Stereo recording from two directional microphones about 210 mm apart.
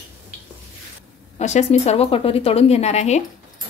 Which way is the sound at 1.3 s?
30° left (ahead or behind).